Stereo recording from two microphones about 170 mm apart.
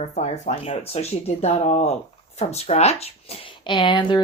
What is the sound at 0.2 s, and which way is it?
Speech, 35° left (ahead or behind).